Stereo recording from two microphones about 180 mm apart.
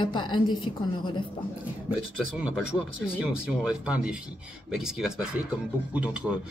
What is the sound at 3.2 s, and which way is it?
Speech, 5° right (ahead or behind).